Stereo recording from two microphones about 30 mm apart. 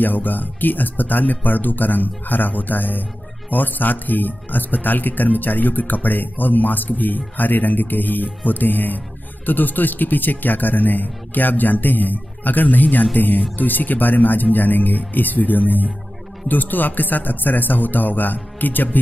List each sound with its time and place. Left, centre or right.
0.0 s speech: left
12.6 s speech: left
13.6 s speech: left